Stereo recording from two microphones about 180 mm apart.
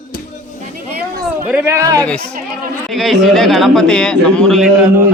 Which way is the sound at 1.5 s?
15° right (ahead or behind).